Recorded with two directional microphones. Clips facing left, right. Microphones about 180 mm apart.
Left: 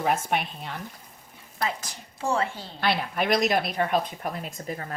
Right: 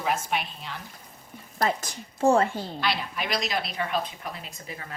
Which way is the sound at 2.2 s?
45° right (ahead or behind).